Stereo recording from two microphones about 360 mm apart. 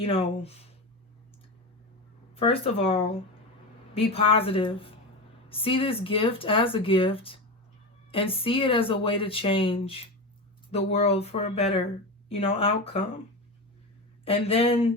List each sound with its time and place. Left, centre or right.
0.0 s speech: centre
2.3 s speech: centre
14.3 s speech: centre